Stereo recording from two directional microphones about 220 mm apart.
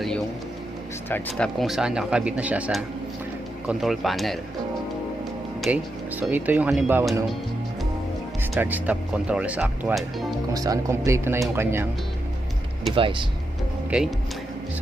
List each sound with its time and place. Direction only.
1.1 s speech: 5° left (ahead or behind)
5.6 s speech: 5° right (ahead or behind)
8.5 s speech: 10° right (ahead or behind)
10.5 s speech: 15° right (ahead or behind)
13.0 s speech: 25° right (ahead or behind)